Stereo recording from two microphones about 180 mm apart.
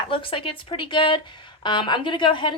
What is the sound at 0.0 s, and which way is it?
Speech, 30° left (ahead or behind).